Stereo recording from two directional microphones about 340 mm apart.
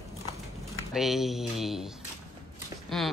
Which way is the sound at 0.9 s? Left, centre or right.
Centre.